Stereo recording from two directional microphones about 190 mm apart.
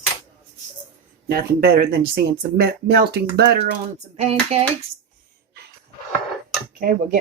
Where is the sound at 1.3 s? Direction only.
55° right (ahead or behind).